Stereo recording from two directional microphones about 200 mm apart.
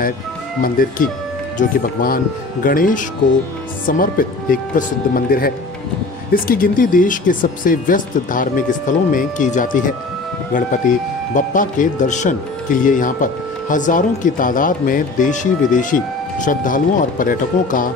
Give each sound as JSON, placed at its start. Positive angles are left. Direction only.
{"t": 0.6, "sound": "speech", "side_deg": 45}